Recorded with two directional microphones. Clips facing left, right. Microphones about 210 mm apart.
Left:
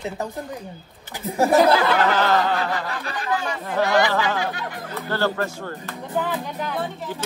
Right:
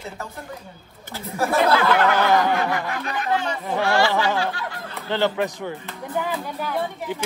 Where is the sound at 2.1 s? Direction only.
15° right (ahead or behind).